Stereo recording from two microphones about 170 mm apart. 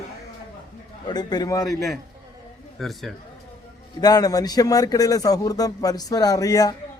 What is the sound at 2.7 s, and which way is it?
Speech, centre (ahead or behind).